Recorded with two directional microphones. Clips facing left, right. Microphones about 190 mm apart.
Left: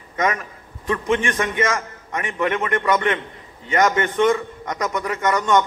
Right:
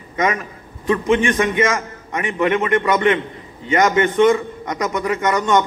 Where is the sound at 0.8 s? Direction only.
20° right (ahead or behind).